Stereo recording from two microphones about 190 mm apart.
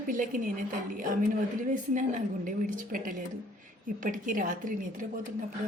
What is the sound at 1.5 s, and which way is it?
A woman's voice, 45° right (ahead or behind).